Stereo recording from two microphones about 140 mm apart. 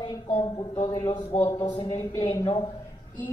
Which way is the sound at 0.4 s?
40° left (ahead or behind).